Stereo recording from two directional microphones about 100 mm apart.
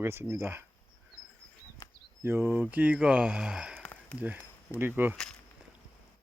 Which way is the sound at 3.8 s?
15° left (ahead or behind).